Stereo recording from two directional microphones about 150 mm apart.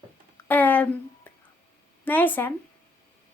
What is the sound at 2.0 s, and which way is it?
Speech, 10° left (ahead or behind).